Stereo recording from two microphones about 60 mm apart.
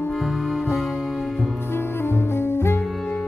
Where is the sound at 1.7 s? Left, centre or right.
Left.